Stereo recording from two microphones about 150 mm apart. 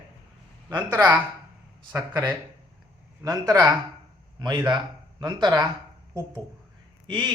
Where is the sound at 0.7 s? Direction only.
30° right (ahead or behind).